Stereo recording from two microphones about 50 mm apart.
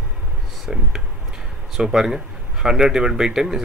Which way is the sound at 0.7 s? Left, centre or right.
Centre.